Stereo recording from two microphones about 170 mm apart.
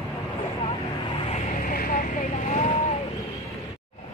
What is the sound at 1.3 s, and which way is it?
Vehicle, 45° left (ahead or behind).